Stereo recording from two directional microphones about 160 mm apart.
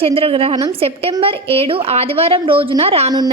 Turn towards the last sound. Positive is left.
turn(degrees=-40)  # may be behind; listen again after turning